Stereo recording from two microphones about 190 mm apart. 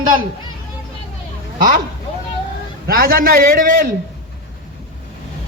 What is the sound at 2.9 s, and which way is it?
A man's voice, 50° right (ahead or behind).